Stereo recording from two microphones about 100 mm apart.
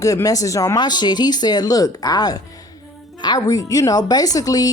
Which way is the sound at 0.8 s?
45° left (ahead or behind).